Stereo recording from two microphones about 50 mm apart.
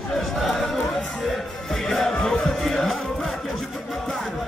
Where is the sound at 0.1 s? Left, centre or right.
Centre.